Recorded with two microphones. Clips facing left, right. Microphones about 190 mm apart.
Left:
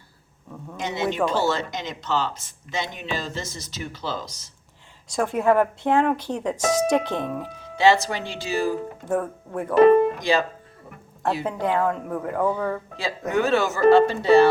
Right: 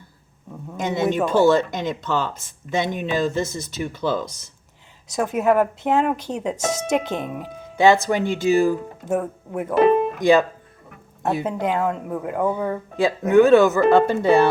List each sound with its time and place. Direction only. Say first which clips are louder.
0.8 s speech: right 3 dB; 50° right (ahead or behind)
5.5 s speech: right 1 dB; 10° right (ahead or behind)
7.5 s speech: right 3 dB; 50° right (ahead or behind)
9.0 s speech: right 2 dB; 20° right (ahead or behind)
10.2 s speech: right 7 dB; 50° right (ahead or behind)
11.4 s speech: left 1 dB; 15° right (ahead or behind)
13.0 s speech: right 10 dB; 55° right (ahead or behind)